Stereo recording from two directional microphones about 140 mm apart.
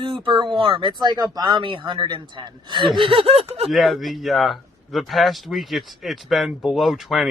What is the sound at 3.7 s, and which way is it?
A man's voice, centre (ahead or behind).